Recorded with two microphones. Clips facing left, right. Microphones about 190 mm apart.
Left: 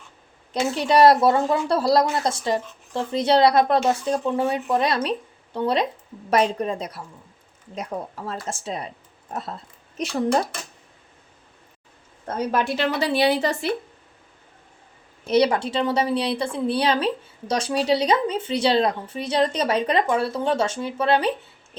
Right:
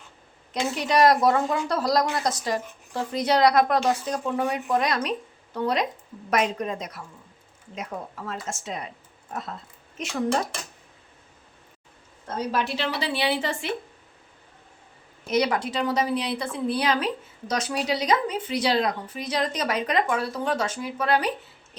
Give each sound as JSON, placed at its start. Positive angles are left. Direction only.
{"t": 0.7, "sound": "a woman's voice", "side_deg": 30}
{"t": 8.3, "sound": "a woman's voice", "side_deg": 35}
{"t": 12.5, "sound": "speech", "side_deg": 50}
{"t": 15.3, "sound": "speech", "side_deg": 30}